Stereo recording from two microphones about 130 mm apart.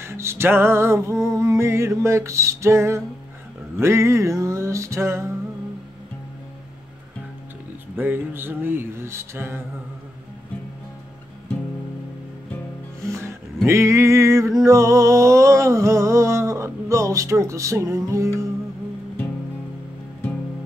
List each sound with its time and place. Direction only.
0.0 s music: 20° right (ahead or behind)
1.2 s male singing: 25° right (ahead or behind)
7.9 s a sound: 15° right (ahead or behind)
13.7 s male singing: 20° right (ahead or behind)